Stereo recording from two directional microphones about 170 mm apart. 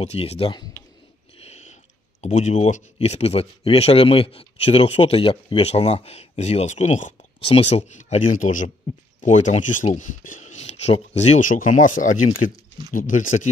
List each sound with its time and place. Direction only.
0.0 s speech: 40° left (ahead or behind)
1.4 s a sound: 40° left (ahead or behind)
2.2 s speech: 45° left (ahead or behind)